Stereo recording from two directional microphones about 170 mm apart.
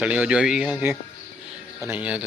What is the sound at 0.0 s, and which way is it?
A man's voice, 5° right (ahead or behind).